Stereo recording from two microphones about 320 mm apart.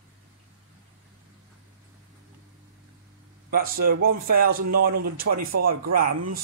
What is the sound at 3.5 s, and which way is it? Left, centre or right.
A man's voice, right.